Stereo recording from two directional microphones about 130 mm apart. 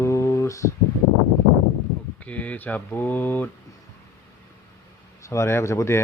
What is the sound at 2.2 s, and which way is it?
Speech, 10° left (ahead or behind).